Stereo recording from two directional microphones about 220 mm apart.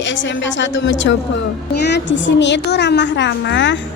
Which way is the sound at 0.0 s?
55° left (ahead or behind).